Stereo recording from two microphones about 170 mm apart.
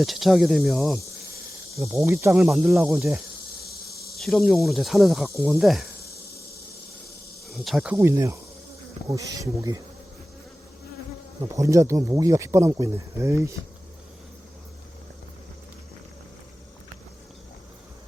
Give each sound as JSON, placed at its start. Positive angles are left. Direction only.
{"t": 0.0, "sound": "speech", "side_deg": 0}
{"t": 1.8, "sound": "speech", "side_deg": -15}
{"t": 3.6, "sound": "insect", "side_deg": 65}
{"t": 4.2, "sound": "speech", "side_deg": 0}
{"t": 6.0, "sound": "a sound", "side_deg": 70}
{"t": 7.4, "sound": "speech", "side_deg": 0}
{"t": 11.4, "sound": "speech", "side_deg": -20}